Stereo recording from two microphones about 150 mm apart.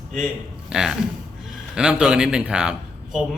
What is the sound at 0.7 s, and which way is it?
A man's voice, 5° right (ahead or behind).